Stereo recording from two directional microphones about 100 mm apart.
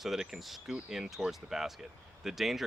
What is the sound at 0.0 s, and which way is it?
Speech, 5° right (ahead or behind).